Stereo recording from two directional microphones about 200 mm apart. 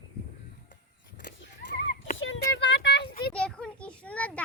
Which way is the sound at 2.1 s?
70° left (ahead or behind).